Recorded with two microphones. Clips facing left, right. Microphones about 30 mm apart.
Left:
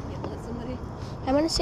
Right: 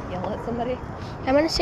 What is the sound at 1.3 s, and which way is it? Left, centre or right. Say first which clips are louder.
Speech: right 4 dB; right.